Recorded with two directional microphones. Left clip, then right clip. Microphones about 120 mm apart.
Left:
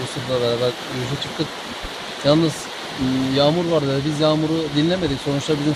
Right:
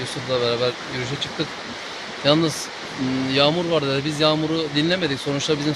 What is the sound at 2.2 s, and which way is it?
Speech, 15° right (ahead or behind).